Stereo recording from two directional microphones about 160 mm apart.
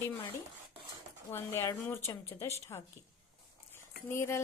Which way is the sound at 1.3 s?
15° left (ahead or behind).